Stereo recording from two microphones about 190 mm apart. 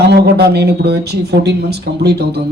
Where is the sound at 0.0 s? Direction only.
60° right (ahead or behind).